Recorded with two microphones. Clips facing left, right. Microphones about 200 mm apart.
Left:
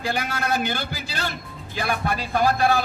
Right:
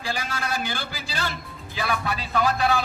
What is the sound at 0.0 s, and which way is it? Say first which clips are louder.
A man's voice: left 4 dB; 60° left (ahead or behind).